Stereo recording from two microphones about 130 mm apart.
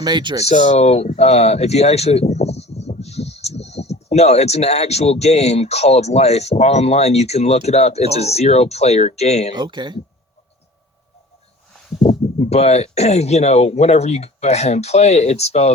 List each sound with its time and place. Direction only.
0.0 s speech: 35° right (ahead or behind)
0.4 s speech: 60° left (ahead or behind)
9.5 s speech: 35° right (ahead or behind)
12.0 s speech: 55° left (ahead or behind)